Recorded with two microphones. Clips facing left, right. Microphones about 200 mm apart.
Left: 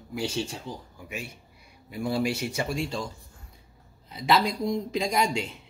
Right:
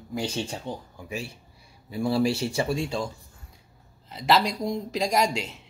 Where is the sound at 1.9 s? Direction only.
30° right (ahead or behind).